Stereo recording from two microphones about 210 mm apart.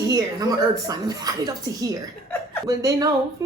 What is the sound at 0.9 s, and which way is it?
Speech, 15° right (ahead or behind).